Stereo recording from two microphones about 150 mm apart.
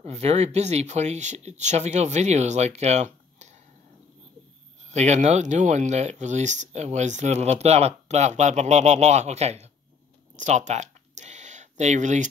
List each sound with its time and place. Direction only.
0.0 s speech: 45° right (ahead or behind)
4.9 s speech: 50° right (ahead or behind)
10.3 s a sound: 50° right (ahead or behind)